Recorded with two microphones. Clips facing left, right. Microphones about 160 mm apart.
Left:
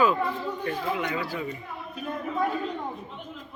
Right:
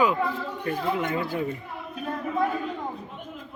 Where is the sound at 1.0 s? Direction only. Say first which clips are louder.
Right 3 dB; 50° right (ahead or behind).